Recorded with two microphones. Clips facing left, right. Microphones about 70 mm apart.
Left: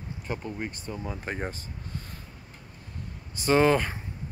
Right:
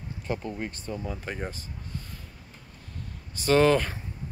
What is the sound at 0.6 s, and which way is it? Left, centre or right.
Speech, centre.